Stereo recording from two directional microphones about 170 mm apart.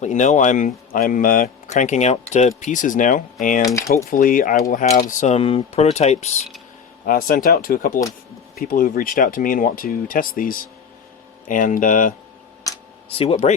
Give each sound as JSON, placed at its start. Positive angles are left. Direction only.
{"t": 0.0, "sound": "speech", "side_deg": 45}
{"t": 3.6, "sound": "speech", "side_deg": 20}
{"t": 3.9, "sound": "speech", "side_deg": 50}
{"t": 7.0, "sound": "speech", "side_deg": 55}
{"t": 13.1, "sound": "speech", "side_deg": 35}